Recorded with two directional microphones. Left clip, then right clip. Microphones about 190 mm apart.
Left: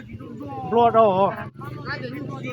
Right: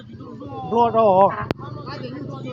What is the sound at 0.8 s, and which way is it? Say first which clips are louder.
Speech: right 2 dB; 50° right (ahead or behind).